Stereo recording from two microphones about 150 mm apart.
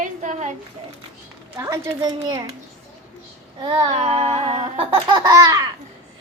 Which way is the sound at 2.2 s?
30° right (ahead or behind).